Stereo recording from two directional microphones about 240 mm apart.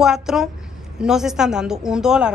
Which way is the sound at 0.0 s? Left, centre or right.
Centre.